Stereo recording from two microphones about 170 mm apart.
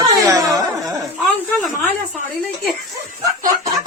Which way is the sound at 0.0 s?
20° right (ahead or behind).